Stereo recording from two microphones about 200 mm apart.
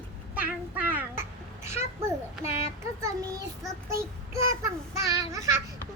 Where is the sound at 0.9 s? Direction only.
10° right (ahead or behind).